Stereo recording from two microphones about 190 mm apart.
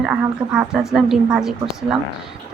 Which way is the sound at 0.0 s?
5° right (ahead or behind).